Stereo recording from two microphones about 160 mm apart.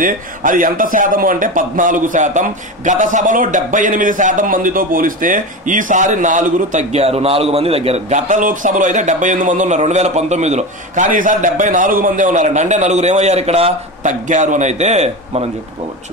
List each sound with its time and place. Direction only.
0.0 s speech: 55° right (ahead or behind)